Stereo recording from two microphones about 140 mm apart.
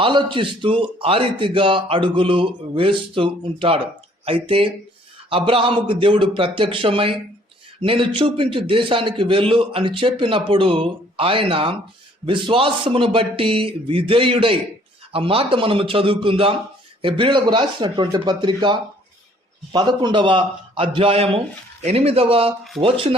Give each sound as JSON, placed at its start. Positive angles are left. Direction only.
{"t": 0.0, "sound": "a man's voice", "side_deg": -35}